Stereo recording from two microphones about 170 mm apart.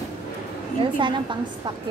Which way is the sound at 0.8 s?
30° right (ahead or behind).